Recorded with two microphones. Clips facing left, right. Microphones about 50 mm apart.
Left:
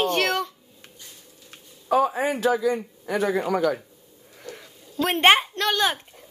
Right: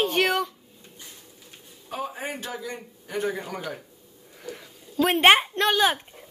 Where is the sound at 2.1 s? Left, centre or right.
Left.